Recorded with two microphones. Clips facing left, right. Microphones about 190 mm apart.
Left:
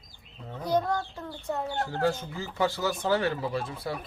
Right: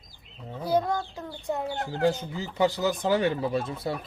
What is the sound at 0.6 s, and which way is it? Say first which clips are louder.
Speech: right 1 dB; 10° right (ahead or behind).